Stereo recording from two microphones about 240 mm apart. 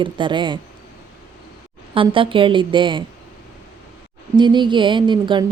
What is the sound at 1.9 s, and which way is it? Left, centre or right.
A woman's voice, right.